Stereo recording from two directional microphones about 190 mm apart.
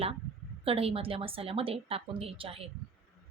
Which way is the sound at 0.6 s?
30° right (ahead or behind).